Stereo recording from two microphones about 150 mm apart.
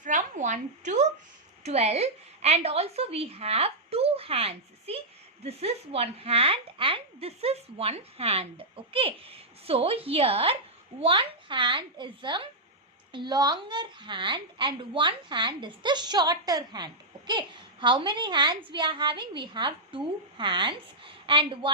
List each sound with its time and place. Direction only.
0.0 s a woman's voice: 55° right (ahead or behind); by 21.7 s 35° right (ahead or behind)